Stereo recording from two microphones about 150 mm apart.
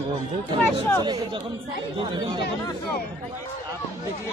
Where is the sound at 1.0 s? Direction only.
25° right (ahead or behind).